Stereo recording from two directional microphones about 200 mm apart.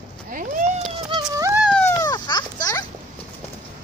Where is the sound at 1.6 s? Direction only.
5° left (ahead or behind).